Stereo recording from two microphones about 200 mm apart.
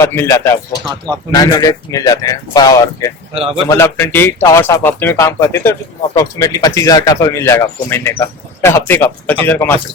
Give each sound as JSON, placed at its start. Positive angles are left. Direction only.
{"t": 0.0, "sound": "speech", "side_deg": 15}
{"t": 3.3, "sound": "a man's voice", "side_deg": -30}
{"t": 3.7, "sound": "speech", "side_deg": 15}